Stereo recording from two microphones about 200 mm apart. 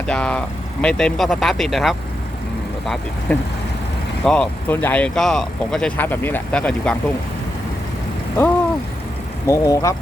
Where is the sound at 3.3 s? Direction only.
10° left (ahead or behind).